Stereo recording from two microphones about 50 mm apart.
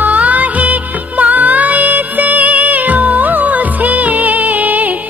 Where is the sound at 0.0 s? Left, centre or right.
Right.